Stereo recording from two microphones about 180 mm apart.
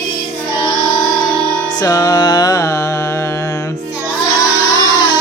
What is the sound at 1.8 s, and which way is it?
Music, 20° left (ahead or behind).